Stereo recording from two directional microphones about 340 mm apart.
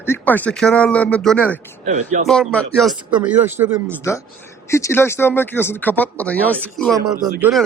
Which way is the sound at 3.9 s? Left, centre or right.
Centre.